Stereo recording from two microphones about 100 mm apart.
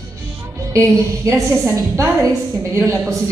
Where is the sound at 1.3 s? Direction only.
30° right (ahead or behind).